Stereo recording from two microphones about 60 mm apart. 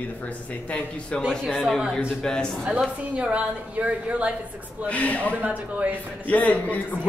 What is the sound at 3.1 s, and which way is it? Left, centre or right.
A woman's voice, right.